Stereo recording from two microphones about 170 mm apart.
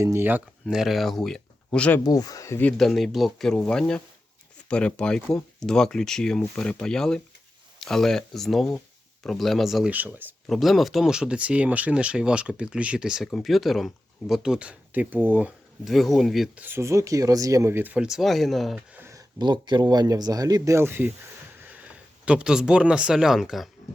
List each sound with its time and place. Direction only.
0.0 s speech: 15° right (ahead or behind); by 2.0 s 5° left (ahead or behind)
2.0 s speech: 20° left (ahead or behind); by 10.3 s 10° right (ahead or behind)
10.4 s speech: centre (ahead or behind)
16.6 s speech: 15° right (ahead or behind); by 18.8 s centre (ahead or behind)
18.9 s a sound: 15° right (ahead or behind)
19.4 s speech: 25° right (ahead or behind)
22.3 s speech: 5° right (ahead or behind)